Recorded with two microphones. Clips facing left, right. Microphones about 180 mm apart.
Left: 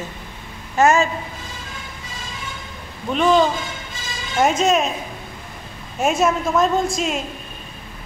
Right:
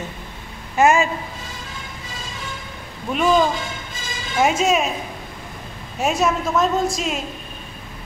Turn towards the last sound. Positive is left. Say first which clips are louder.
# left 1 dB
turn(degrees=0)  # may be behind; listen again after turning